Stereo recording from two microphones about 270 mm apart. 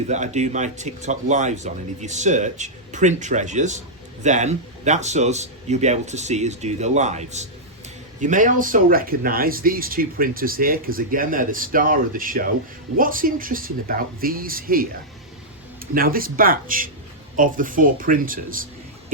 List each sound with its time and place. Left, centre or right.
0.1 s speech: right
16.0 s speech: right